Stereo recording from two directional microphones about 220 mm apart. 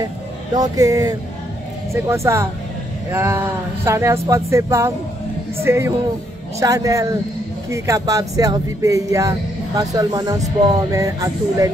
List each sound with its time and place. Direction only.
0.6 s speech: 15° right (ahead or behind)